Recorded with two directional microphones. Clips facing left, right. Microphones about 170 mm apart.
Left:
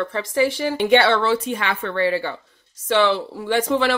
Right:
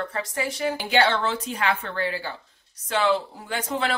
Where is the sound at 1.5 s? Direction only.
70° left (ahead or behind).